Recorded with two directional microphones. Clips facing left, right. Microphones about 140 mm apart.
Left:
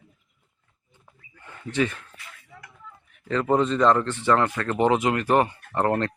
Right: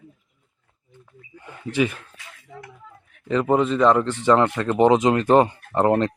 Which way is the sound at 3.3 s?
15° right (ahead or behind).